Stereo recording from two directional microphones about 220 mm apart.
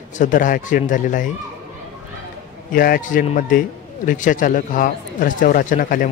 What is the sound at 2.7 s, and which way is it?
Speech, 40° left (ahead or behind).